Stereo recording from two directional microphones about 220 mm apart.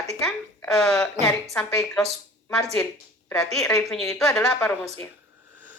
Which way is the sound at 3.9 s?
Centre (ahead or behind).